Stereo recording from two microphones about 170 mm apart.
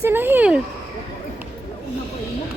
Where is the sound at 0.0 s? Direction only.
10° right (ahead or behind).